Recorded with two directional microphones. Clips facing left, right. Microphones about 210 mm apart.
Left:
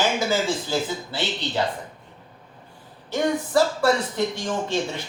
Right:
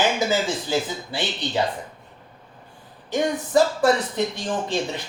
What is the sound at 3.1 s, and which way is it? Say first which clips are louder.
Speech: right 1 dB; 15° right (ahead or behind).